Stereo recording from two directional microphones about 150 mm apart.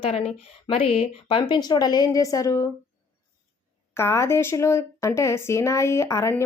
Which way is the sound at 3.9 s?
20° left (ahead or behind).